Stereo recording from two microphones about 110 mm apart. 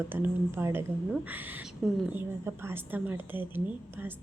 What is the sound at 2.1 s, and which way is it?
A woman's voice, 20° right (ahead or behind).